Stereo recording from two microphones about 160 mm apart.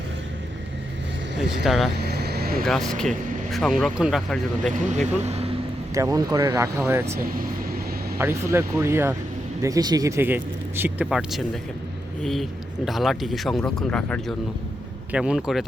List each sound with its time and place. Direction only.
1.4 s speech: 5° right (ahead or behind)
2.0 s vehicle: 80° right
2.6 s speech: 5° left (ahead or behind)
4.9 s speech: 45° right (ahead or behind)
5.9 s speech: 20° right (ahead or behind)
7.2 s speech: 65° right (ahead or behind)
8.2 s speech: 15° right (ahead or behind)